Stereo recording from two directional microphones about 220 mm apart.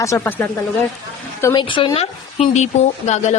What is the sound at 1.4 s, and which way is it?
Speech, 20° left (ahead or behind).